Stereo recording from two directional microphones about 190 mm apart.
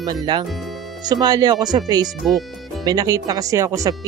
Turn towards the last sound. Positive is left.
turn(degrees=-15)  # may be behind; listen again after turning